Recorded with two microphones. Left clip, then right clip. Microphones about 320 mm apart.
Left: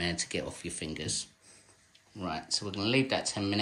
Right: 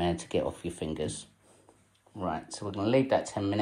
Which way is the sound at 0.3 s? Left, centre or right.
Centre.